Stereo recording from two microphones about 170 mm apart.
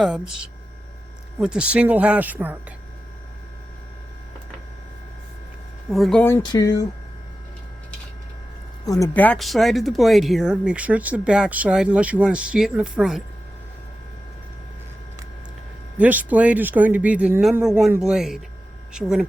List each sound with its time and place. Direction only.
0.0 s speech: 5° right (ahead or behind)
5.9 s speech: centre (ahead or behind)
6.4 s speech: 25° left (ahead or behind)
8.9 s speech: 15° left (ahead or behind); by 13.2 s 5° right (ahead or behind)
16.0 s speech: 10° right (ahead or behind)